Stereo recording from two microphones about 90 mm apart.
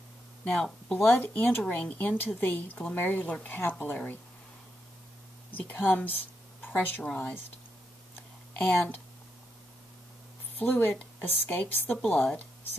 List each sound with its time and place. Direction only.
0.5 s speech: 5° left (ahead or behind)
1.0 s speech: 20° left (ahead or behind)
5.5 s speech: 20° left (ahead or behind)
7.2 s speech: 20° left (ahead or behind)
8.5 s speech: 15° left (ahead or behind)
10.6 s speech: 20° left (ahead or behind)
12.0 s speech: 5° left (ahead or behind)